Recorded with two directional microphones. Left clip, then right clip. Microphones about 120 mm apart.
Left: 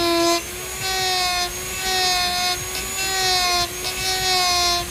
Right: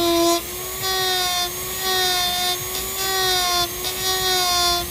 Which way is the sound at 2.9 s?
70° right (ahead or behind).